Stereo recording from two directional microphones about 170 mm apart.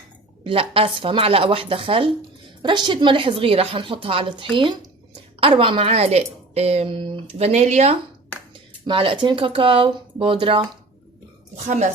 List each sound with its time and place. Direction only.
0.4 s speech: 35° right (ahead or behind)
8.9 s speech: 30° right (ahead or behind)
11.5 s a woman's voice: 45° right (ahead or behind)